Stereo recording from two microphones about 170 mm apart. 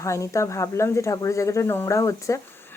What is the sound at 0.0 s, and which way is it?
Speech, 15° left (ahead or behind).